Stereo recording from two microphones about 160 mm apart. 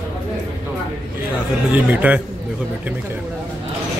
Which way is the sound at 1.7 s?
10° right (ahead or behind).